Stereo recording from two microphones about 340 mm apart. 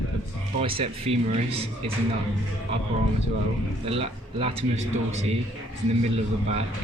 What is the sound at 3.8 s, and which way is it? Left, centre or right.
Speech, centre.